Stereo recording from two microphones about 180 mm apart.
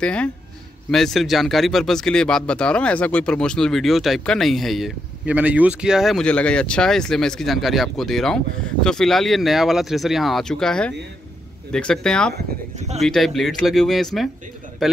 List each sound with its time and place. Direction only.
0.0 s speech: 5° left (ahead or behind)
12.7 s speech: 40° right (ahead or behind)
13.0 s speech: centre (ahead or behind)